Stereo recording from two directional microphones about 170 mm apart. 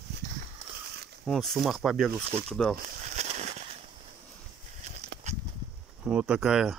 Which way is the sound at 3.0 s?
40° right (ahead or behind).